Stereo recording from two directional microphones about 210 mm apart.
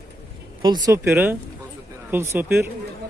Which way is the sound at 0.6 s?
20° right (ahead or behind).